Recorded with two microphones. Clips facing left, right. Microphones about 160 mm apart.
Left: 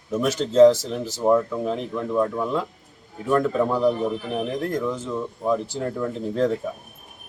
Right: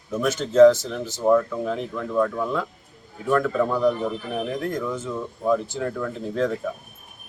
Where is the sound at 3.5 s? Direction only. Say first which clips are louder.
Left 1 dB; 15° left (ahead or behind).